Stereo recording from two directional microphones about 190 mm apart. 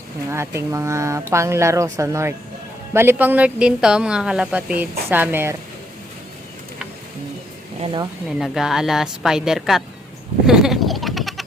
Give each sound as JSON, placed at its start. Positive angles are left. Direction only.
{"t": 0.3, "sound": "speech", "side_deg": -15}
{"t": 8.4, "sound": "a woman's voice", "side_deg": 0}
{"t": 10.4, "sound": "bleat", "side_deg": -5}